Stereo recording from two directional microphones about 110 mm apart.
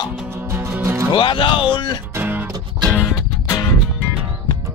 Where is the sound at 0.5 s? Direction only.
20° right (ahead or behind).